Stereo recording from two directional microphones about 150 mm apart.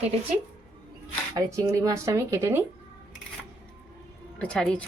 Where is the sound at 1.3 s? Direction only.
20° right (ahead or behind).